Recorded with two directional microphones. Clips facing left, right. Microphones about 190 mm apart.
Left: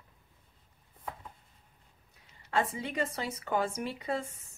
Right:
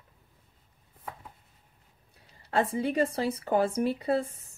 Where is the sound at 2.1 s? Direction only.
35° right (ahead or behind).